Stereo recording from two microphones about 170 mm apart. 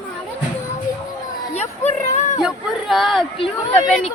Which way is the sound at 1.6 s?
45° left (ahead or behind).